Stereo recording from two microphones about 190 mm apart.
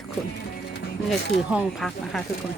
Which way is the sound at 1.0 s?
5° right (ahead or behind).